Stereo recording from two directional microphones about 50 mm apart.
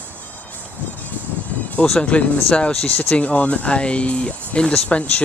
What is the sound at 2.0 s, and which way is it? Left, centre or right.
Speech, left.